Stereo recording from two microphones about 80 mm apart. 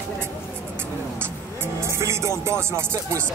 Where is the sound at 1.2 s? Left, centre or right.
Right.